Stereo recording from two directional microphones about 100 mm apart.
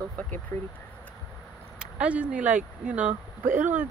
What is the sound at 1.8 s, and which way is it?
Speech, 10° right (ahead or behind).